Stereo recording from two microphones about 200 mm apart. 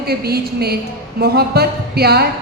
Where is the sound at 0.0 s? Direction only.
50° right (ahead or behind).